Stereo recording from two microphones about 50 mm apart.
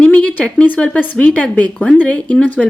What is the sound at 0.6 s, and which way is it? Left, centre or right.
Speech, left.